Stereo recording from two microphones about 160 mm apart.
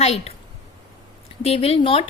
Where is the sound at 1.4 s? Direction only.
40° left (ahead or behind).